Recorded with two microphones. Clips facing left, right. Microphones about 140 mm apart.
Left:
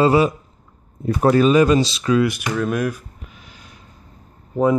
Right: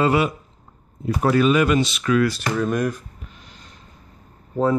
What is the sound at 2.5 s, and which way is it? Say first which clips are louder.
Speech: left 1 dB; 5° left (ahead or behind).